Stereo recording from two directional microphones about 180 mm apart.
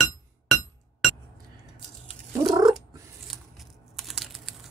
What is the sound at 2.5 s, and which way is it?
Cat, 20° right (ahead or behind).